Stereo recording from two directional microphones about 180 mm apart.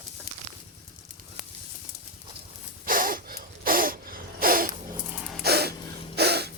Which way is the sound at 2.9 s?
50° right (ahead or behind).